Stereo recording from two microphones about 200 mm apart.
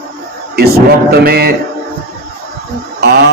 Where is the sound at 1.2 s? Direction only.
50° right (ahead or behind).